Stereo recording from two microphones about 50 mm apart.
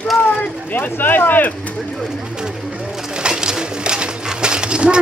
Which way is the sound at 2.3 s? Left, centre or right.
Centre.